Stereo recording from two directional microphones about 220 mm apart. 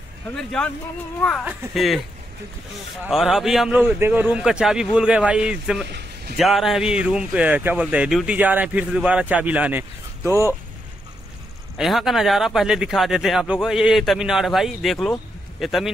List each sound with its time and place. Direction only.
0.4 s speech: 5° left (ahead or behind)
3.0 s speech: centre (ahead or behind)
5.9 s a sound: 50° right (ahead or behind)
6.3 s speech: centre (ahead or behind)
11.7 s speech: centre (ahead or behind)